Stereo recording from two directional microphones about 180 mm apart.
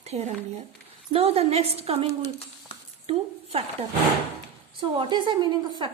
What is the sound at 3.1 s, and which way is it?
A woman's voice, 35° right (ahead or behind).